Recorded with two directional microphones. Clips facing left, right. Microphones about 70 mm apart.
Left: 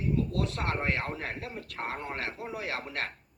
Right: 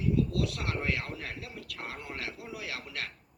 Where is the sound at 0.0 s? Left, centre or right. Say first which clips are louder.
Right 1 dB; left.